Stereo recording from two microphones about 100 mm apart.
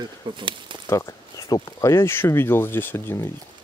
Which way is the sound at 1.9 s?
25° left (ahead or behind).